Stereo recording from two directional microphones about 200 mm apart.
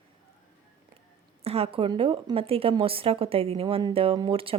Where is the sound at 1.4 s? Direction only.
30° right (ahead or behind).